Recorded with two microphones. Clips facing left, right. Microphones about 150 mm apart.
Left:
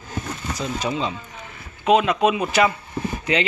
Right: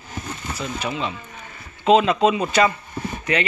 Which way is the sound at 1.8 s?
5° left (ahead or behind).